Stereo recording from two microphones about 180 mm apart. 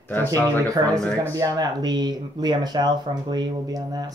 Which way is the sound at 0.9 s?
5° left (ahead or behind).